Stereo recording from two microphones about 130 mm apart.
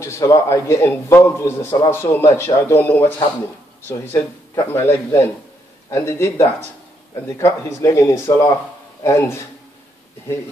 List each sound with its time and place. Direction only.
0.0 s a man's voice: 25° left (ahead or behind)